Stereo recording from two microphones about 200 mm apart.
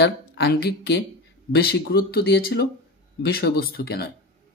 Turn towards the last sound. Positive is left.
turn(degrees=50)  # may be behind; listen again after turning